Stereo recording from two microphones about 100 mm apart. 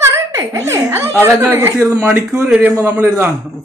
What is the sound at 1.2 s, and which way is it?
A man's voice, 25° right (ahead or behind).